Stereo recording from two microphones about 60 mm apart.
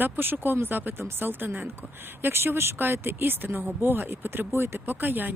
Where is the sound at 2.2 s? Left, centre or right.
Right.